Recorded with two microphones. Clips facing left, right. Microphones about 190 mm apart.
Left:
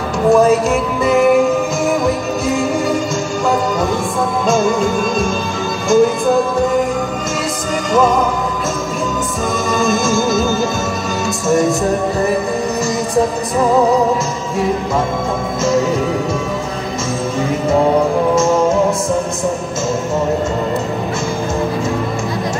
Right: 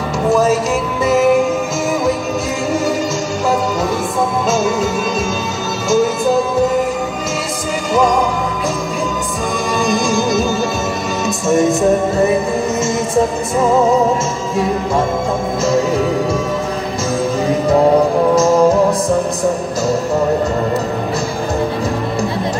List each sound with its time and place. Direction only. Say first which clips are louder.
0.3 s music: left 3 dB; centre (ahead or behind)
4.5 s music: left 2 dB; centre (ahead or behind)
11.2 s music: right 1 dB; centre (ahead or behind)
18.3 s music: right 3 dB; 35° right (ahead or behind)